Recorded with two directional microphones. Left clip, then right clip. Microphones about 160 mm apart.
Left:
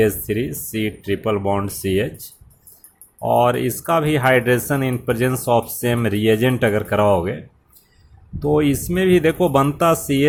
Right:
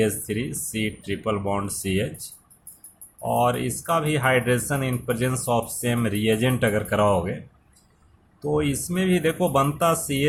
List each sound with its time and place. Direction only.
0.0 s speech: 35° left (ahead or behind)
8.4 s speech: 35° left (ahead or behind)